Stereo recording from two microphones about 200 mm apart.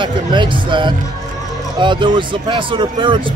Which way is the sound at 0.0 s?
25° right (ahead or behind).